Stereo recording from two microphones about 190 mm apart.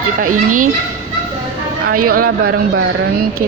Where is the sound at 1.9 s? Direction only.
50° right (ahead or behind).